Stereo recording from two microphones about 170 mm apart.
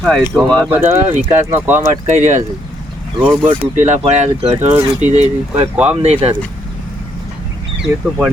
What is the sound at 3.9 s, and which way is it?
Speech, 40° right (ahead or behind).